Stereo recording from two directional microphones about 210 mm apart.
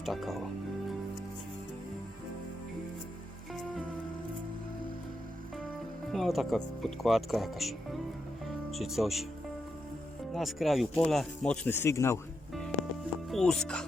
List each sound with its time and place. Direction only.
0.0 s speech: centre (ahead or behind)
6.1 s speech: centre (ahead or behind)
10.3 s speech: centre (ahead or behind)
13.3 s speech: 5° left (ahead or behind)